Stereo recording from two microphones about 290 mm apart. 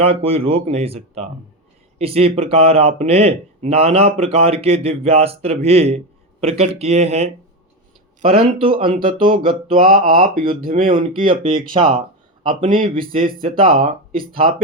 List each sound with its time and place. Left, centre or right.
0.0 s a man's voice: centre
10.8 s a man's voice: centre